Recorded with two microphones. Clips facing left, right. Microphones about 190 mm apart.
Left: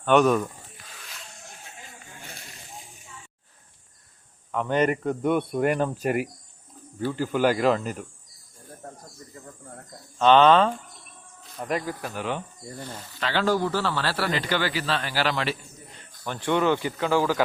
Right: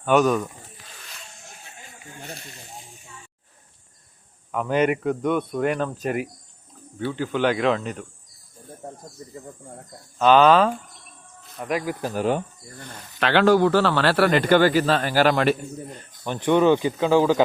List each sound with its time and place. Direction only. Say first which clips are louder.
0.0 s speech: even; centre (ahead or behind)
4.5 s speech: right 2 dB; 5° right (ahead or behind)
9.3 s speech: right 2 dB; 10° right (ahead or behind)
12.0 s speech: right 7 dB; 40° right (ahead or behind)
13.1 s a man's voice: right 7 dB; 70° right (ahead or behind); by 16.0 s 50° right (ahead or behind)
16.2 s speech: right 5 dB; 20° right (ahead or behind)